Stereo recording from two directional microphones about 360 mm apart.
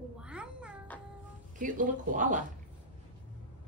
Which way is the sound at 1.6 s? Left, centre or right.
Right.